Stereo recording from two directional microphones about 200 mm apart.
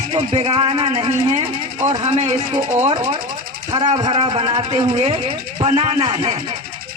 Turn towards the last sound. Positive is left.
turn(degrees=-30)  # may be behind; listen again after turning